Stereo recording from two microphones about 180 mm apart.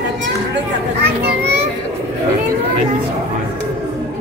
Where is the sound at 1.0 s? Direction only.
65° right (ahead or behind).